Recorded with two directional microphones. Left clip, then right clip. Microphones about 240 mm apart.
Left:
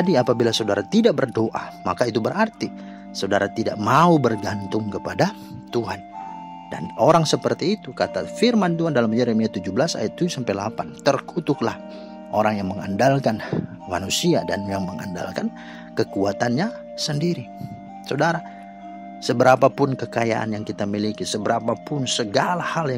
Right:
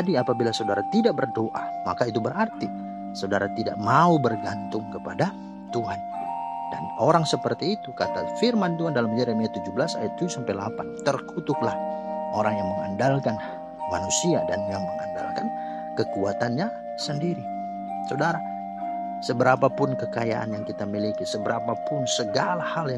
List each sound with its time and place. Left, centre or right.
0.0 s speech: left
7.0 s speech: left